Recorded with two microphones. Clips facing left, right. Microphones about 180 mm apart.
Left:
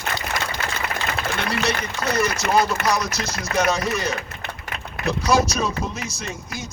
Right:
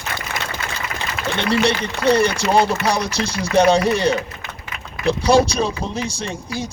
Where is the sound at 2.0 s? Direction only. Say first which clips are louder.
Right 7 dB; 30° right (ahead or behind).